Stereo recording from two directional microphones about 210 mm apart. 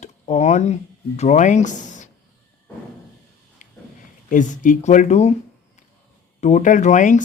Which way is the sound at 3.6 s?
35° left (ahead or behind).